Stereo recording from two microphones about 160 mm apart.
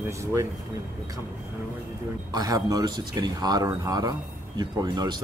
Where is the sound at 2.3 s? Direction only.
25° right (ahead or behind).